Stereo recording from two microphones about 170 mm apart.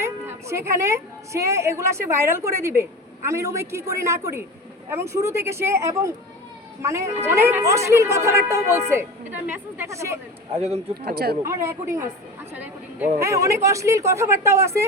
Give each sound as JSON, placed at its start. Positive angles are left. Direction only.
{"t": 0.0, "sound": "a woman's voice", "side_deg": -15}
{"t": 7.3, "sound": "speech", "side_deg": -15}
{"t": 10.5, "sound": "a man's voice", "side_deg": -35}
{"t": 11.0, "sound": "speech", "side_deg": -65}
{"t": 11.4, "sound": "speech", "side_deg": -15}